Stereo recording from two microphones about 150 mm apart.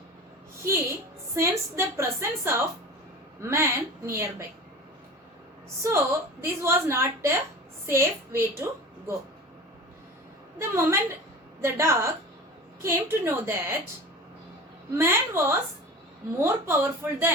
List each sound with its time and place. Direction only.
0.6 s a woman's voice: 20° right (ahead or behind)
5.8 s a woman's voice: 20° right (ahead or behind)
10.6 s a woman's voice: 20° right (ahead or behind)
14.9 s a woman's voice: 15° right (ahead or behind)